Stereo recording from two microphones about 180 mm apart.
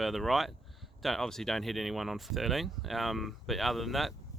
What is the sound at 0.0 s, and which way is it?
Speech, centre (ahead or behind).